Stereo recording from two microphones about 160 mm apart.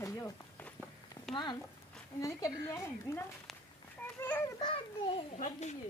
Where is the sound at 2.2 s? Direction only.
20° left (ahead or behind).